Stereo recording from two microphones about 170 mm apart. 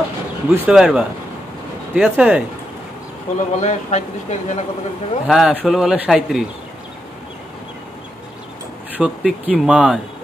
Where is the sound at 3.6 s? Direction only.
40° left (ahead or behind).